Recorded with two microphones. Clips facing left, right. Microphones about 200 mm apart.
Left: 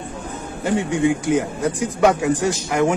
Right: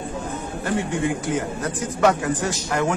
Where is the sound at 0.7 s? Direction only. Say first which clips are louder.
Left 5 dB; 15° left (ahead or behind).